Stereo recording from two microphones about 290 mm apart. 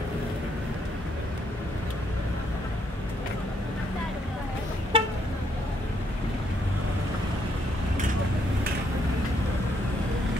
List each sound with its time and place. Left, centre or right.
4.9 s vehicle: centre